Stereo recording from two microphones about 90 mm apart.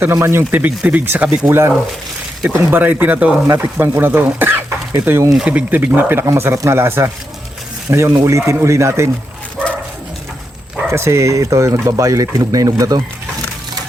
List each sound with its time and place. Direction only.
0.0 s speech: 25° right (ahead or behind)
5.5 s speech: 20° right (ahead or behind)
10.8 s speech: 30° right (ahead or behind)